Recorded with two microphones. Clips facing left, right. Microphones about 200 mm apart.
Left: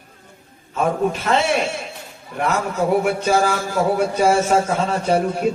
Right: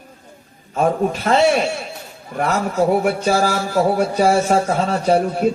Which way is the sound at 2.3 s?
45° right (ahead or behind).